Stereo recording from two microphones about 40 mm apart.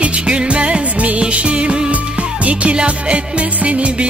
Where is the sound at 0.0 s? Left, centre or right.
Right.